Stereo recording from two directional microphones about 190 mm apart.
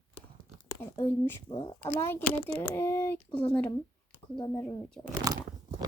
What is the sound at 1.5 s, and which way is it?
Speech, 25° left (ahead or behind).